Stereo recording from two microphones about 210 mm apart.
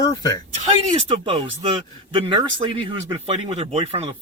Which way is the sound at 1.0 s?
25° right (ahead or behind).